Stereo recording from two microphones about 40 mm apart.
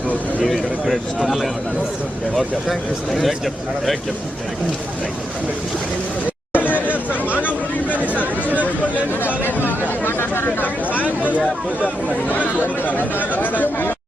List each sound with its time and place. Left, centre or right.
0.4 s a man's voice: centre
6.5 s chatter: left
7.3 s a sound: left
7.9 s a sound: right
9.2 s chatter: left
10.1 s chatter: left
12.3 s chatter: left